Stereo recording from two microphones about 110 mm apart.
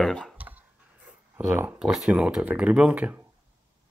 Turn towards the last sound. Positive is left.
turn(degrees=-15)  # may be behind; listen again after turning